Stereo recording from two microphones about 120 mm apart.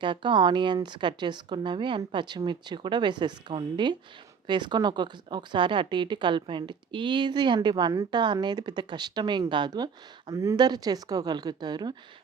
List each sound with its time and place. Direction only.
0.0 s a woman's voice: 40° right (ahead or behind)